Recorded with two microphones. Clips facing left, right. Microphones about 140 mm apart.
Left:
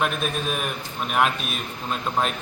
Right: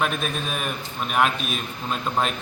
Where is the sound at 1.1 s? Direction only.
Centre (ahead or behind).